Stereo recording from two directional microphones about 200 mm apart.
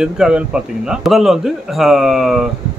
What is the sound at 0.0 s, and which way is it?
Speech, 5° right (ahead or behind).